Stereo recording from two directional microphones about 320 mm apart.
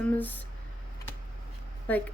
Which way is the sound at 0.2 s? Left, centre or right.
Centre.